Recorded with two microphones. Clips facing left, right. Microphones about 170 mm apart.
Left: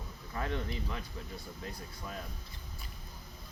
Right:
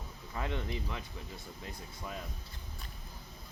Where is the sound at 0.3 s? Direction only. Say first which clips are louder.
Left 1 dB; 20° right (ahead or behind).